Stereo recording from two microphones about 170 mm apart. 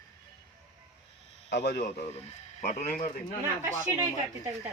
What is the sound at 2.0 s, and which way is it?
A man's voice, 40° left (ahead or behind).